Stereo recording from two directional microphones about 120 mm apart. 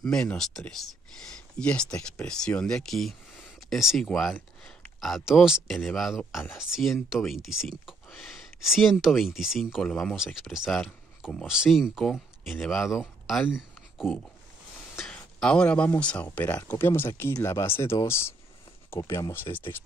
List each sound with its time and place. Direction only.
0.0 s speech: 5° left (ahead or behind)
13.5 s a sound: 5° right (ahead or behind)
15.0 s speech: 5° left (ahead or behind)